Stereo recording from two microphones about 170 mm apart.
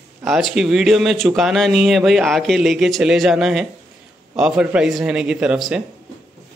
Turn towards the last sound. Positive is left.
turn(degrees=-5)  # may be behind; listen again after turning